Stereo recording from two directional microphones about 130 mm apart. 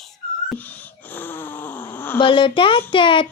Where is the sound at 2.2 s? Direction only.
40° left (ahead or behind).